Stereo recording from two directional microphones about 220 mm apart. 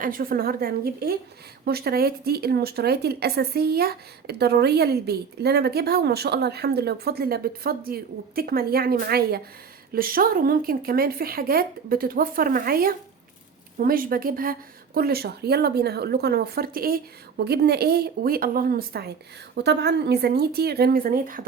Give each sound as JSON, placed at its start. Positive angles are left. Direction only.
{"t": 0.0, "sound": "speech", "side_deg": -40}